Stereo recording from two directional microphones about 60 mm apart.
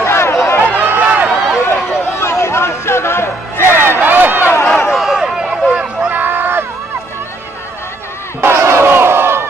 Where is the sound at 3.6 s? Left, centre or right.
Right.